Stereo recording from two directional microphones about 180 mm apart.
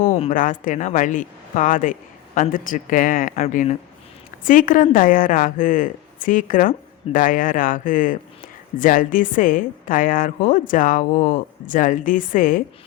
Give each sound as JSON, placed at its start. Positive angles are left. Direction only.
{"t": 0.2, "sound": "a woman's voice", "side_deg": 45}